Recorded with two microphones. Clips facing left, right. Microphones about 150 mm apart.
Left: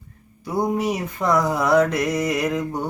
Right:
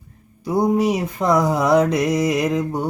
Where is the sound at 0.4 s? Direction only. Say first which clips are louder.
Right 4 dB; 20° right (ahead or behind).